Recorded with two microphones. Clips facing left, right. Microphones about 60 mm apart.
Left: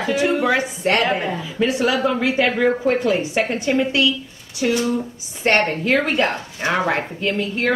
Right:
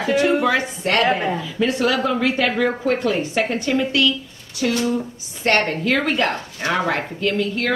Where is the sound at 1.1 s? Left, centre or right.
Centre.